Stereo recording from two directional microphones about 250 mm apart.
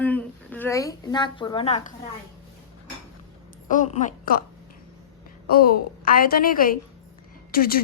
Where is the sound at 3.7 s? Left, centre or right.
Left.